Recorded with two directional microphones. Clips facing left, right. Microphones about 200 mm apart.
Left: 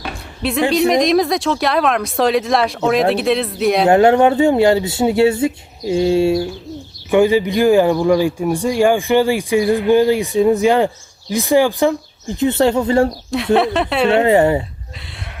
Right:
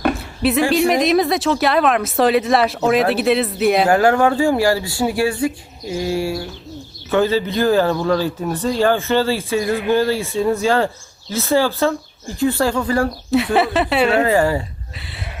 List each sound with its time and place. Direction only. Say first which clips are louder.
0.7 s speech: left 5 dB; centre (ahead or behind)
3.8 s speech: left 8 dB; 20° left (ahead or behind)
13.3 s speech: even; centre (ahead or behind)
14.1 s speech: left 3 dB; 25° left (ahead or behind)
14.9 s speech: right 1 dB; centre (ahead or behind)